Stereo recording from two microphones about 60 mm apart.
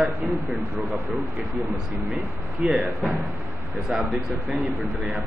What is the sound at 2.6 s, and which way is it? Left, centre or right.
Speech, centre.